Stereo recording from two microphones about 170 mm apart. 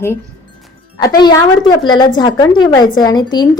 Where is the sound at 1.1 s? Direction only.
25° left (ahead or behind).